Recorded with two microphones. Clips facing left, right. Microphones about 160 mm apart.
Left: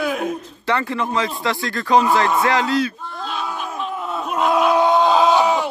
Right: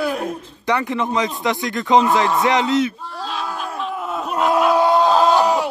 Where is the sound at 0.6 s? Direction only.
15° right (ahead or behind).